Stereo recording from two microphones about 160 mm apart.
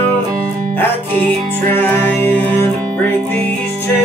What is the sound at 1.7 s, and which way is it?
Music, 10° left (ahead or behind).